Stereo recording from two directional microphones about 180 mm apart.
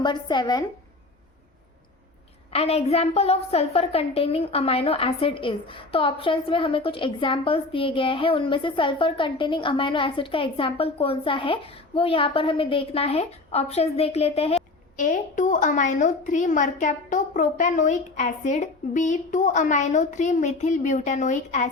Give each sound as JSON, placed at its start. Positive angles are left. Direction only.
{"t": 0.0, "sound": "speech", "side_deg": 25}
{"t": 2.5, "sound": "a woman's voice", "side_deg": 35}